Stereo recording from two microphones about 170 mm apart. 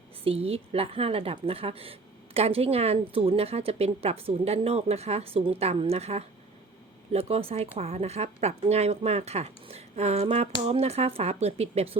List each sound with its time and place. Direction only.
0.3 s a woman's voice: 35° right (ahead or behind)